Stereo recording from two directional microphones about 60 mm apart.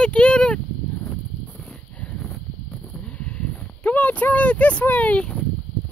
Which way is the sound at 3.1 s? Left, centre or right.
Left.